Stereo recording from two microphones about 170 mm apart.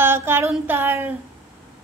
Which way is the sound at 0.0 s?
15° right (ahead or behind).